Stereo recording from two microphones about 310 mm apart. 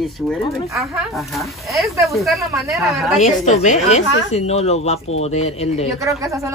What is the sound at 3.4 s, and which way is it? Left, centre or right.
A woman's voice, left.